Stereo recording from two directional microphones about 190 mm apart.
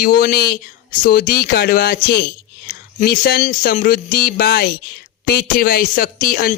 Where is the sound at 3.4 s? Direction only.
45° left (ahead or behind).